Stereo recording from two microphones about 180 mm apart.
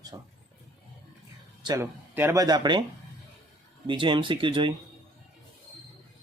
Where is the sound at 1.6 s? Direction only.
15° right (ahead or behind).